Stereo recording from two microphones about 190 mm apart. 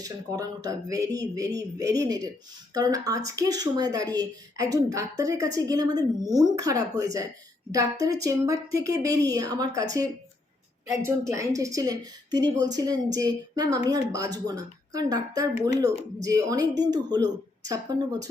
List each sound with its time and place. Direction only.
0.0 s a woman's voice: 20° right (ahead or behind)